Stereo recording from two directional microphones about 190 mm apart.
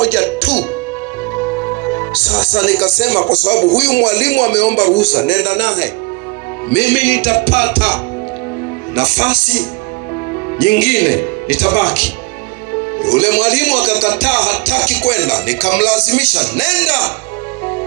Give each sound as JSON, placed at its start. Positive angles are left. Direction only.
{"t": 0.0, "sound": "music", "side_deg": 30}
{"t": 6.7, "sound": "speech", "side_deg": 50}
{"t": 9.0, "sound": "speech", "side_deg": 50}